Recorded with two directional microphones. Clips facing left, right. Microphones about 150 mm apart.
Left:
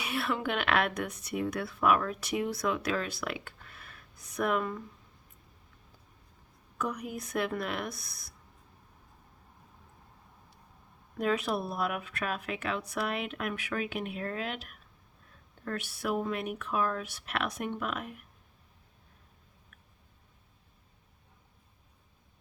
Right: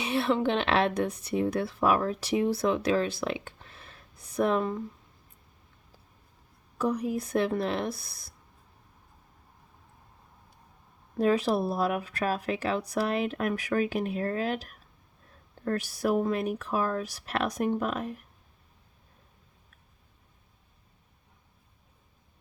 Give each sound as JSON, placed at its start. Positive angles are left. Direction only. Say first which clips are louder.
{"t": 0.0, "sound": "speech", "louder": "right 6 dB", "side_deg": -25}
{"t": 6.7, "sound": "speech", "louder": "right 7 dB", "side_deg": -30}
{"t": 11.2, "sound": "speech", "louder": "right 5 dB", "side_deg": -30}